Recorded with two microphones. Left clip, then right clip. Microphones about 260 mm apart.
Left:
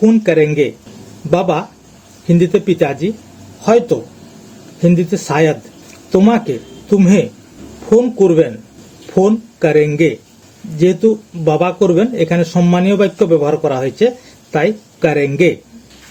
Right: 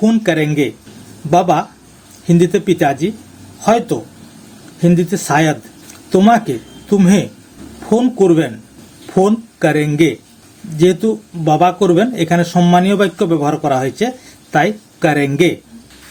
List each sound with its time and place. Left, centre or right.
0.0 s speech: right